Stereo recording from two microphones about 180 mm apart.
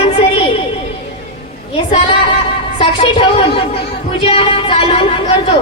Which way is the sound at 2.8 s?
30° left (ahead or behind).